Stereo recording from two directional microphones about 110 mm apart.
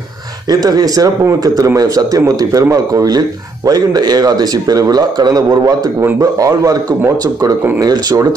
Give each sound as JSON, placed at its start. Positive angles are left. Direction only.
{"t": 0.5, "sound": "speech", "side_deg": -35}